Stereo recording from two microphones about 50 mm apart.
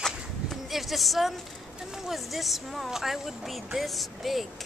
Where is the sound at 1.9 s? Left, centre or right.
Centre.